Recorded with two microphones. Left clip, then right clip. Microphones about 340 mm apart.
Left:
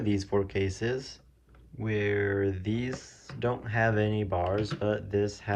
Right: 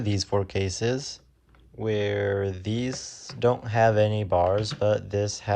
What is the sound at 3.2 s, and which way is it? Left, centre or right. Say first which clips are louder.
Speech: right 8 dB; centre.